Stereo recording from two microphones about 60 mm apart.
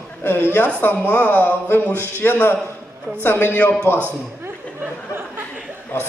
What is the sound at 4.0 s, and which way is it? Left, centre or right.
Speech, right.